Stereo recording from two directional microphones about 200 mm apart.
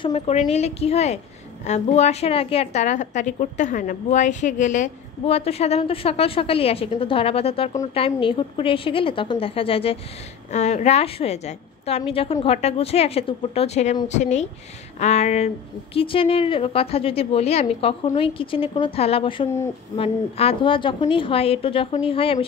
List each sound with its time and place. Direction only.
0.0 s a woman's voice: 35° left (ahead or behind)